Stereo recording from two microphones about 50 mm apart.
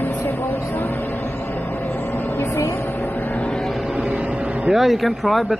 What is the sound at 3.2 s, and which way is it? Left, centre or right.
Vehicle, left.